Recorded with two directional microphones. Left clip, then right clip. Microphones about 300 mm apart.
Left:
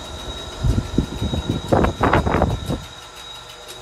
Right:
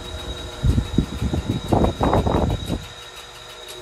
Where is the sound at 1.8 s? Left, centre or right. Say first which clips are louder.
Left 2 dB; right.